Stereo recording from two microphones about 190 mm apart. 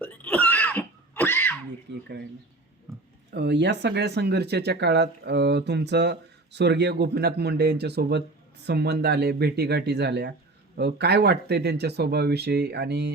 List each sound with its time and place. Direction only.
0.0 s cough: 10° left (ahead or behind)
1.9 s speech: 60° right (ahead or behind)
3.3 s speech: 65° right (ahead or behind)